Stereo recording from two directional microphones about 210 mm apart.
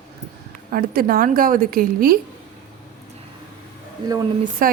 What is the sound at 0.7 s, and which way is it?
A woman's voice, 45° right (ahead or behind).